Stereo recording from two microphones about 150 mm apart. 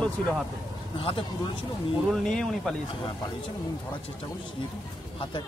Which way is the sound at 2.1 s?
5° left (ahead or behind).